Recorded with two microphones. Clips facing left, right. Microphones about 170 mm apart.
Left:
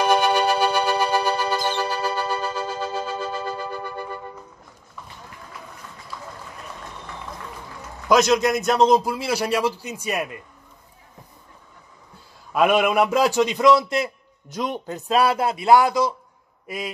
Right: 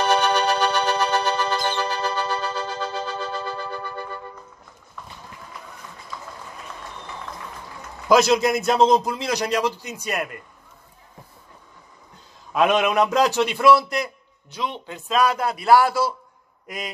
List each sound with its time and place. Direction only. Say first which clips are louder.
0.0 s music: left 1 dB; 10° left (ahead or behind)
8.1 s a man's voice: even; 5° right (ahead or behind)
12.5 s a man's voice: left 1 dB; 10° left (ahead or behind); by 14.1 s 25° left (ahead or behind)
14.5 s a man's voice: left 3 dB; 45° left (ahead or behind); by 16.1 s 20° left (ahead or behind)
16.6 s a man's voice: left 3 dB; 5° left (ahead or behind)